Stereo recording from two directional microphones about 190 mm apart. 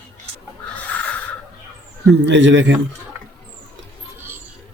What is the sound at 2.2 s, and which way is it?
Speech, 70° right (ahead or behind).